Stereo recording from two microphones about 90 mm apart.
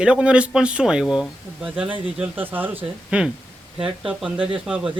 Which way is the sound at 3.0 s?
5° right (ahead or behind).